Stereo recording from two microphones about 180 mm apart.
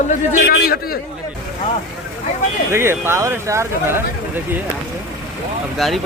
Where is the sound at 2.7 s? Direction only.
15° right (ahead or behind).